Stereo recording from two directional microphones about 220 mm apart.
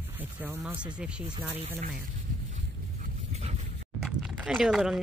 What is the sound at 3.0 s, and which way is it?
Dog, 30° right (ahead or behind).